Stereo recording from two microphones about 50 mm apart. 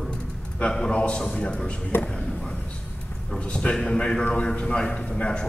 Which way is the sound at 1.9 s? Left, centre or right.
Left.